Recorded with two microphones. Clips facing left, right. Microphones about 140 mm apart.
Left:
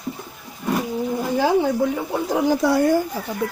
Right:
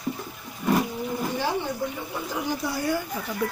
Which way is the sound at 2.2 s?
80° left.